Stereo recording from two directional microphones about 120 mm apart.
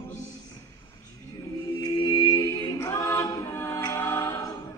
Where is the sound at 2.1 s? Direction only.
30° left (ahead or behind).